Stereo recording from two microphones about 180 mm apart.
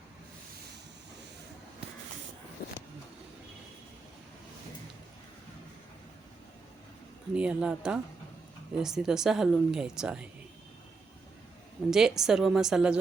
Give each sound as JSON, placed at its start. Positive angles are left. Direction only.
{"t": 2.6, "sound": "vehicle", "side_deg": 60}
{"t": 7.3, "sound": "speech", "side_deg": -5}
{"t": 11.9, "sound": "speech", "side_deg": -5}